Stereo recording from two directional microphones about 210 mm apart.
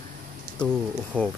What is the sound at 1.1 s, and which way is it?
Speech, 5° left (ahead or behind).